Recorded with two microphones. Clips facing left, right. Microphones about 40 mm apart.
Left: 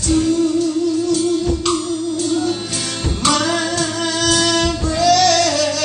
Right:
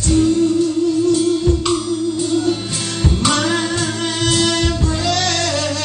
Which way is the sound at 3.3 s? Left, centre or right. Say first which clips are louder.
Even; centre.